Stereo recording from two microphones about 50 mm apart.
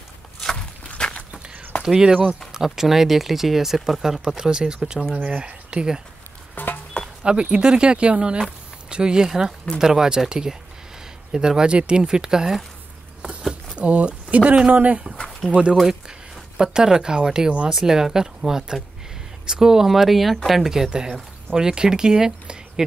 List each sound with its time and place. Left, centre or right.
0.9 s walk: centre
1.8 s speech: centre
6.5 s a sound: left
7.2 s speech: right
13.7 s speech: right
15.7 s speech: centre